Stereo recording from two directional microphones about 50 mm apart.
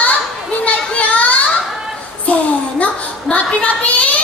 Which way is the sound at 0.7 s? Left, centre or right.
Left.